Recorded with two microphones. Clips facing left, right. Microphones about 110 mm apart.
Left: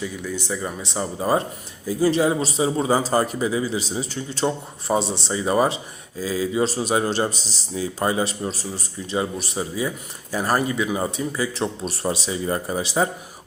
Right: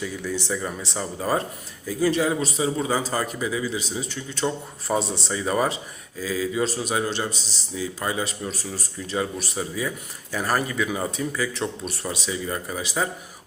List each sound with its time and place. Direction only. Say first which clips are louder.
0.0 s speech: even; 10° left (ahead or behind)
0.8 s a man's voice: left 3 dB; 20° left (ahead or behind)
4.4 s a man's voice: left 2 dB; 25° left (ahead or behind)